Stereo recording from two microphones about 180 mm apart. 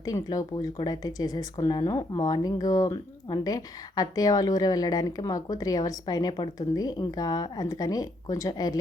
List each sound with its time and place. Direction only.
0.0 s speech: 20° left (ahead or behind)